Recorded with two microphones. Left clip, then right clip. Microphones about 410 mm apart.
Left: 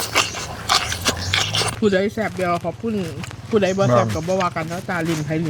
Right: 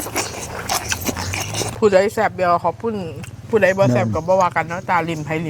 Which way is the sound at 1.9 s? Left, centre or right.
Right.